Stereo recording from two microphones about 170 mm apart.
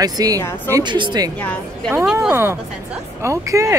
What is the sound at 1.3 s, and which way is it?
Speech, 10° left (ahead or behind).